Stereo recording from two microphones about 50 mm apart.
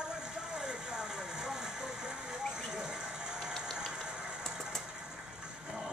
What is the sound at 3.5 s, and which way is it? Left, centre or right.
Vehicle, centre.